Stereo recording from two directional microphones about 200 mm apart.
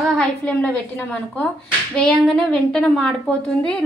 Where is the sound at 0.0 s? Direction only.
5° left (ahead or behind).